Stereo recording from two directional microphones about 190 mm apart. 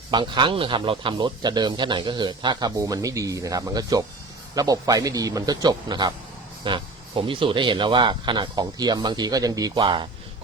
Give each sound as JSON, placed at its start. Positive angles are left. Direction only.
{"t": 0.1, "sound": "speech", "side_deg": -25}